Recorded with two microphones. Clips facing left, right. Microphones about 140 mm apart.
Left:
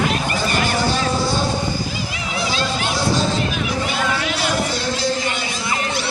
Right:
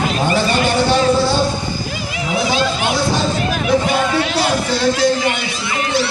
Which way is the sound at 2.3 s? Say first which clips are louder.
Right 6 dB; 60° right (ahead or behind).